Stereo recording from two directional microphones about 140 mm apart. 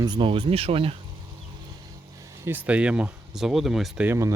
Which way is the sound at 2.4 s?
10° right (ahead or behind).